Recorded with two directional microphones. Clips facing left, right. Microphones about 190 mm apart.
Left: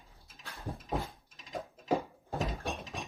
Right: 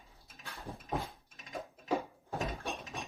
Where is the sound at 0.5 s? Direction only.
35° left (ahead or behind).